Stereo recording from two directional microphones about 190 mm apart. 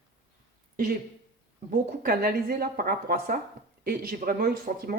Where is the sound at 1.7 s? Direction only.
50° right (ahead or behind).